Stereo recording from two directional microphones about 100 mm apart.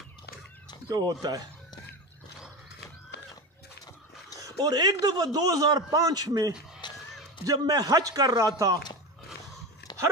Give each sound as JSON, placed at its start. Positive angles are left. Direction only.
{"t": 0.8, "sound": "a man's voice", "side_deg": -40}
{"t": 4.4, "sound": "a man's voice", "side_deg": -40}
{"t": 6.8, "sound": "a sound", "side_deg": 50}
{"t": 7.4, "sound": "a man's voice", "side_deg": -45}